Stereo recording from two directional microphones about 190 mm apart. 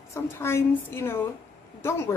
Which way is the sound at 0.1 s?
15° left (ahead or behind).